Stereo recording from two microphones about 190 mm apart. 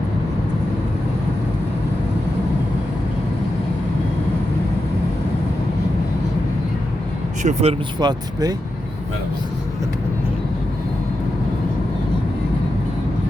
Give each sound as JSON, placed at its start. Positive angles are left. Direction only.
{"t": 7.4, "sound": "speech", "side_deg": -30}